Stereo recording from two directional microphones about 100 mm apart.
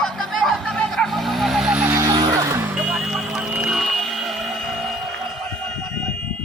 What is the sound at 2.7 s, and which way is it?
Vehicle, 10° right (ahead or behind).